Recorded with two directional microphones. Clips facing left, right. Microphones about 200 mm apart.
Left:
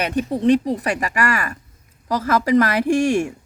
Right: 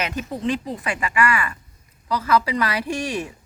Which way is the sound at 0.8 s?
40° left (ahead or behind).